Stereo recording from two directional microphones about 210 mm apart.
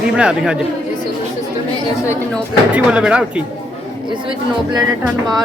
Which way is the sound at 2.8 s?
5° right (ahead or behind).